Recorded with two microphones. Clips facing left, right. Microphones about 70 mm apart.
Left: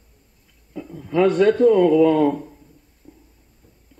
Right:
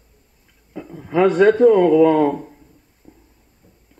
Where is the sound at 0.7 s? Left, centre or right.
Right.